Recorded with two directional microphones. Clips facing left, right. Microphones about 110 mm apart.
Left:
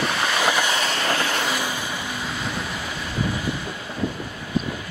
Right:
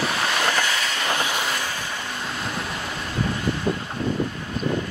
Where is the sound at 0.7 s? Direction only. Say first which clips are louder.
Left 3 dB; 25° left (ahead or behind).